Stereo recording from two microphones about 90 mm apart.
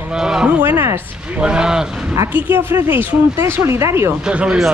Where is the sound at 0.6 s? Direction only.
25° right (ahead or behind).